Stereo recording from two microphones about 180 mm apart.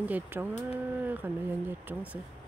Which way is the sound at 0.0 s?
10° right (ahead or behind).